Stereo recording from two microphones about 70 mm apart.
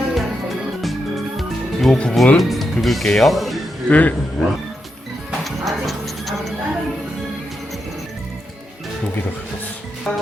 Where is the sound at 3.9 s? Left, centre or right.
Left.